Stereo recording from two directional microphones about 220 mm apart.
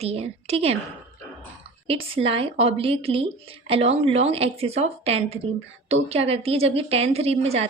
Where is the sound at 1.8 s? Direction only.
25° right (ahead or behind).